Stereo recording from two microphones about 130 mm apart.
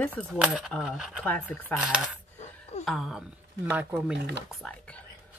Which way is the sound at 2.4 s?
60° left (ahead or behind).